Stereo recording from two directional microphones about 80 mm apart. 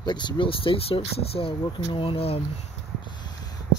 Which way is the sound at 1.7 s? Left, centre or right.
Left.